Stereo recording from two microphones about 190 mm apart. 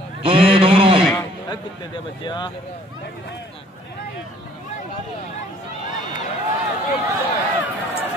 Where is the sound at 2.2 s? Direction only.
25° left (ahead or behind).